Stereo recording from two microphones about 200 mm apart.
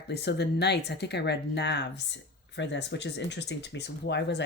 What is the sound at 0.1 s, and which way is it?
Speech, 55° left (ahead or behind).